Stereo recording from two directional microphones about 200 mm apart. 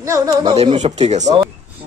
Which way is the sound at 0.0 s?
15° right (ahead or behind).